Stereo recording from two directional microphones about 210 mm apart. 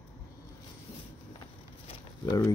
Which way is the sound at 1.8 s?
15° left (ahead or behind).